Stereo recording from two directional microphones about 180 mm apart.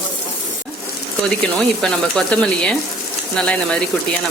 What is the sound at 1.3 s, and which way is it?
Speech, 5° left (ahead or behind).